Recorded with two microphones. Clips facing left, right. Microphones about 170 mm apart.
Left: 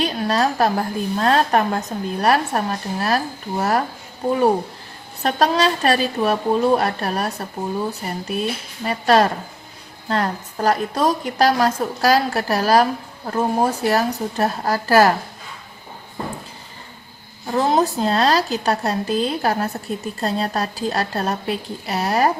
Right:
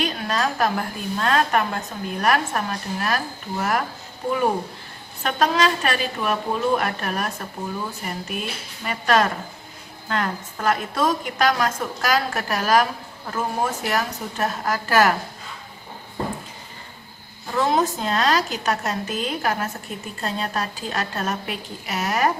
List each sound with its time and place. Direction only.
0.0 s speech: 35° left (ahead or behind)
17.5 s speech: 35° left (ahead or behind)